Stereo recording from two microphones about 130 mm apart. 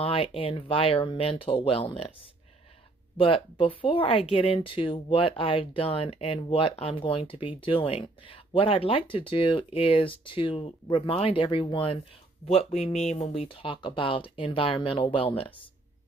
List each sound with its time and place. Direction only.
0.0 s speech: 45° left (ahead or behind)
3.2 s speech: 45° left (ahead or behind)
12.4 s speech: 60° left (ahead or behind); by 15.5 s 40° left (ahead or behind)